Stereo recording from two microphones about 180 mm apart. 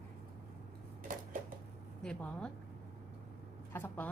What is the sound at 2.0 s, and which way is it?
Speech, 5° left (ahead or behind).